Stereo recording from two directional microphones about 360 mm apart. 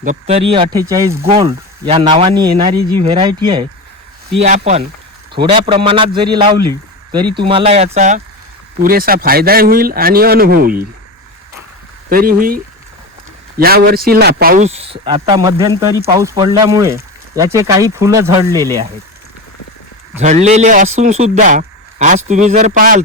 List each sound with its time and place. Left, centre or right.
0.0 s a man's voice: centre
12.0 s a man's voice: right
13.6 s a man's voice: right; by 18.7 s centre
20.1 s a man's voice: centre